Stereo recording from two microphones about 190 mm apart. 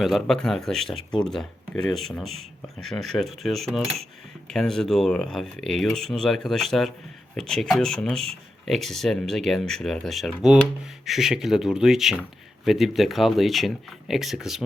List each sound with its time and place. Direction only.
0.0 s speech: centre (ahead or behind)